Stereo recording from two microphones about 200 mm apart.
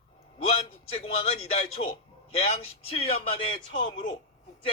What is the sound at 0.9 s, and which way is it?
A man's voice, 30° left (ahead or behind).